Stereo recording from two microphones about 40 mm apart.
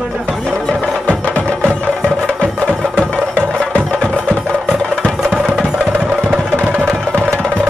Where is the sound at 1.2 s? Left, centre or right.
Right.